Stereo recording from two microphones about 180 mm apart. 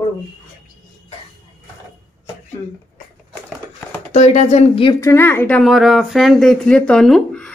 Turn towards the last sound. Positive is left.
turn(degrees=5)  # may be behind; listen again after turning